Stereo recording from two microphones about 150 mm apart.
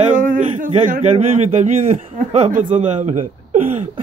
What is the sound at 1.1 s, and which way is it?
A man's voice, 45° right (ahead or behind).